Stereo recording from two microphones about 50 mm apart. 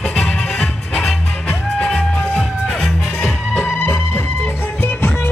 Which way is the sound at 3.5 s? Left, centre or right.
Left.